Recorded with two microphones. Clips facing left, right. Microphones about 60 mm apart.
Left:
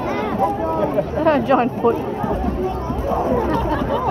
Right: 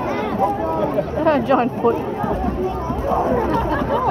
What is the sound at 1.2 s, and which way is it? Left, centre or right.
Speech, centre.